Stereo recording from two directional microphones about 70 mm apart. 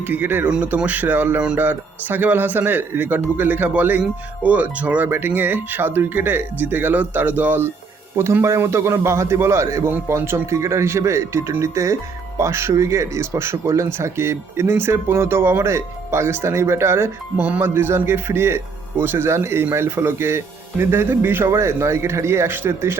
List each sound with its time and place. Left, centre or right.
0.1 s speech: right
0.4 s speech: centre; by 17.1 s right
17.3 s speech: right
17.6 s speech: right